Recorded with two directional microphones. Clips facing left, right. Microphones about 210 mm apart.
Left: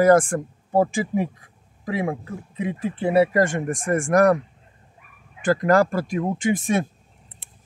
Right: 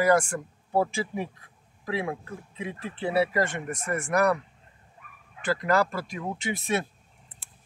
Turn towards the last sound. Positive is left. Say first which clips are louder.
# left 7 dB
turn(degrees=50)  # may be behind; listen again after turning